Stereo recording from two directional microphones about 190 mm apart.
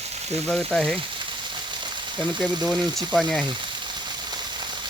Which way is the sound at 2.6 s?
Centre (ahead or behind).